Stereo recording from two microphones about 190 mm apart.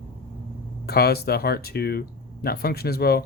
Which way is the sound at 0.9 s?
55° left (ahead or behind).